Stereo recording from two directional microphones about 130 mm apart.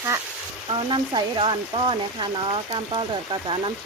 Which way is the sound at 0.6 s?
40° right (ahead or behind).